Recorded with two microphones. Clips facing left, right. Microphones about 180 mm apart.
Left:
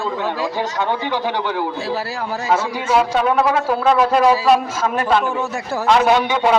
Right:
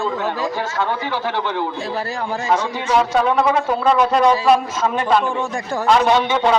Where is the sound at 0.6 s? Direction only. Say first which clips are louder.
Left 1 dB; 15° left (ahead or behind).